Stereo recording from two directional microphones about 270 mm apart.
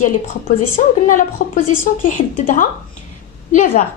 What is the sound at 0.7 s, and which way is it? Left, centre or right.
A woman's voice, left.